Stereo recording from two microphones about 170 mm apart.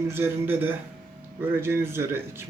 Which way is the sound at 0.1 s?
10° right (ahead or behind).